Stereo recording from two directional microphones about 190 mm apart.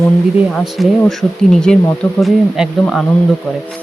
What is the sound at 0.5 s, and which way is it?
Speech, centre (ahead or behind).